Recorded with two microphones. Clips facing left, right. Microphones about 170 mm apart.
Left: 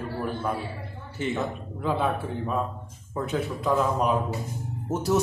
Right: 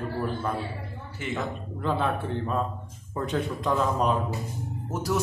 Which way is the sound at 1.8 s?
5° left (ahead or behind).